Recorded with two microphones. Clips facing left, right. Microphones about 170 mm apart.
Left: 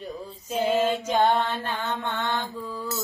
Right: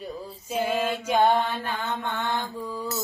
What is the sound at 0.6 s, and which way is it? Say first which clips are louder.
Mantra: left 3 dB; 10° left (ahead or behind).